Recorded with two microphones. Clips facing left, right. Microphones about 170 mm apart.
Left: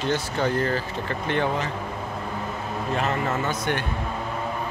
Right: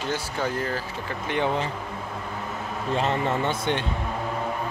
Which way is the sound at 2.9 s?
30° right (ahead or behind).